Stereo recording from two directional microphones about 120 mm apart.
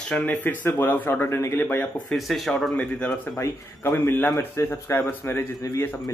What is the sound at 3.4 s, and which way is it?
Speech, 20° left (ahead or behind).